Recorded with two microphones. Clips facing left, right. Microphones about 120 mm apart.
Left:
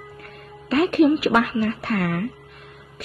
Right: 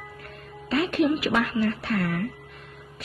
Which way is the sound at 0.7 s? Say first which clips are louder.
Left 6 dB; 55° left (ahead or behind).